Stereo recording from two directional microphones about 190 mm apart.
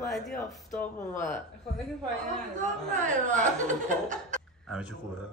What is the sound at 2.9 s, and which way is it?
Speech, 40° right (ahead or behind).